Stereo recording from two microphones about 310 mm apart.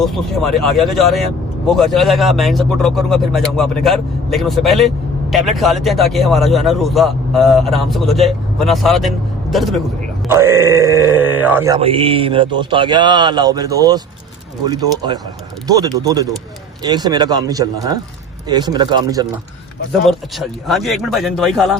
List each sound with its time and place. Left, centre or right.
0.0 s a man's voice: centre
19.9 s a man's voice: centre